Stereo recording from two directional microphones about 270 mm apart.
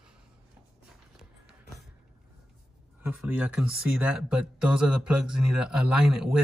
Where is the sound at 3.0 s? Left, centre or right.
Centre.